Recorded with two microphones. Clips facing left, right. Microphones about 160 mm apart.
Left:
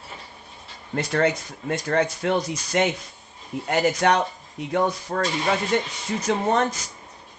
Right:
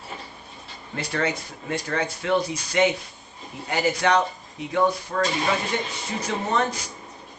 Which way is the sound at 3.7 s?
50° left (ahead or behind).